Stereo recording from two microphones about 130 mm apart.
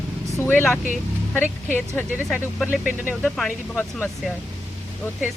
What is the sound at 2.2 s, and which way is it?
Speech, centre (ahead or behind).